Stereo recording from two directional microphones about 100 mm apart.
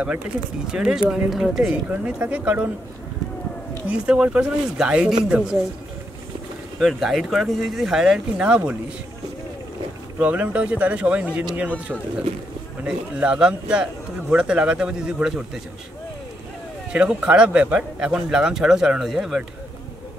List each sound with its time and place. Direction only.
0.7 s a man's voice: 5° right (ahead or behind)
3.8 s a man's voice: 10° right (ahead or behind)
6.8 s speech: 5° right (ahead or behind)
10.2 s a man's voice: 15° right (ahead or behind)
12.8 s a man's voice: 10° right (ahead or behind)
16.9 s a man's voice: 10° right (ahead or behind)